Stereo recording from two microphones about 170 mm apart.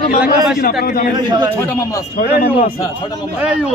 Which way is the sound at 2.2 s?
55° left (ahead or behind).